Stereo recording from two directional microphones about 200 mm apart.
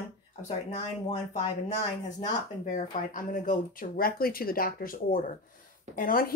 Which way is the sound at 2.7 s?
40° left (ahead or behind).